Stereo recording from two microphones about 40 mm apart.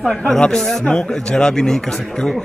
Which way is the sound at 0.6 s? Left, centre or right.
Centre.